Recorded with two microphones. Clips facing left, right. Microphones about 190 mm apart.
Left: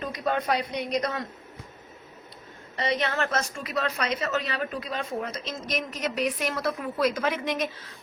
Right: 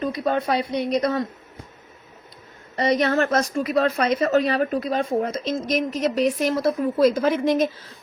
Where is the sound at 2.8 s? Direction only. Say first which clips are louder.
Right 7 dB; 40° right (ahead or behind).